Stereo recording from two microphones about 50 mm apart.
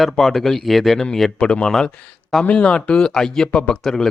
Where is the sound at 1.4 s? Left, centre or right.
Centre.